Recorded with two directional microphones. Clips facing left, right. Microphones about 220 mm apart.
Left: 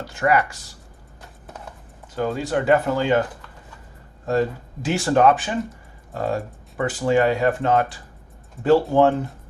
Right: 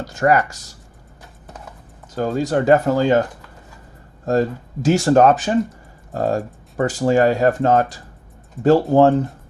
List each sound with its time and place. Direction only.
0.0 s speech: 40° right (ahead or behind)
2.1 s speech: 40° right (ahead or behind)
4.3 s speech: 40° right (ahead or behind)